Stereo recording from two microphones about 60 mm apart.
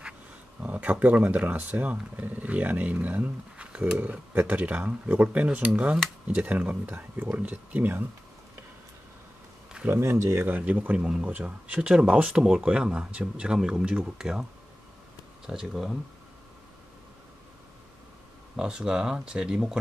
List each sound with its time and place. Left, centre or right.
0.6 s speech: right
9.8 s speech: right
10.6 s speech: right
15.4 s speech: centre
18.6 s speech: centre